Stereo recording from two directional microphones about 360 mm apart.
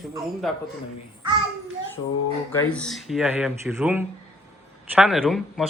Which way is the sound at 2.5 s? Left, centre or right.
Centre.